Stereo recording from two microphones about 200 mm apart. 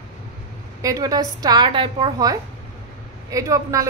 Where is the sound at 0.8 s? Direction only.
20° right (ahead or behind).